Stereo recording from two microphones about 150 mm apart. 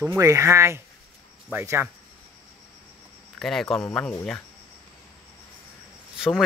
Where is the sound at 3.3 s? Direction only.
Centre (ahead or behind).